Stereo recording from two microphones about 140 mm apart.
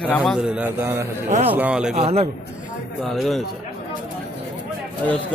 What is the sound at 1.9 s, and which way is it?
Speech, 45° right (ahead or behind).